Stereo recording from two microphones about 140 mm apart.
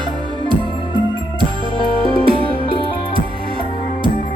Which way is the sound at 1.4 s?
35° right (ahead or behind).